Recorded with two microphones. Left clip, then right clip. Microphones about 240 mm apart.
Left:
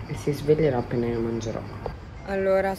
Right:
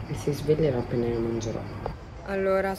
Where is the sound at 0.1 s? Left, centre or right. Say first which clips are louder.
Left 3 dB; left.